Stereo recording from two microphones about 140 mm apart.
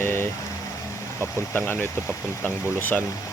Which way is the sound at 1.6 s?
15° left (ahead or behind).